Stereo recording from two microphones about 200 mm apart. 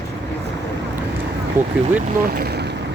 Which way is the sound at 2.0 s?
50° right (ahead or behind).